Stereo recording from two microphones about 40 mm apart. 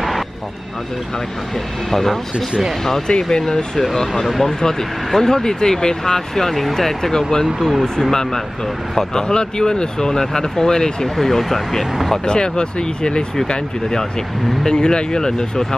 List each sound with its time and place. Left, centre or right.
1.9 s speech: centre
11.2 s speech: centre
12.3 s speech: left